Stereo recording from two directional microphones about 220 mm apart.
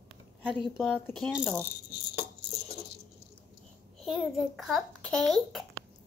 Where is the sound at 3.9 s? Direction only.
Centre (ahead or behind).